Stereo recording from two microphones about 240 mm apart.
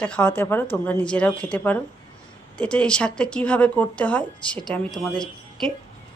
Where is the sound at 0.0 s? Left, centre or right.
Centre.